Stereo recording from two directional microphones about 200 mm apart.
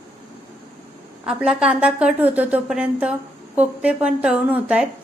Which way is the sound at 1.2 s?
5° right (ahead or behind).